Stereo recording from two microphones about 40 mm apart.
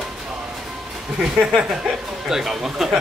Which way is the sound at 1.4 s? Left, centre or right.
Centre.